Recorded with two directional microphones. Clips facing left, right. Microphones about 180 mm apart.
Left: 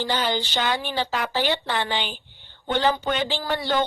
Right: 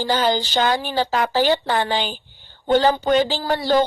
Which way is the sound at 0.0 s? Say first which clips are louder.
Right 5 dB; 40° right (ahead or behind).